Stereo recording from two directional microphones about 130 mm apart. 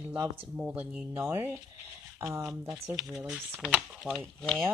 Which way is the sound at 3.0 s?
5° right (ahead or behind).